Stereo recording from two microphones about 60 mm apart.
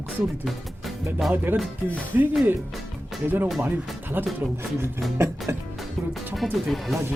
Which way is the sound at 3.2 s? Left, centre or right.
Right.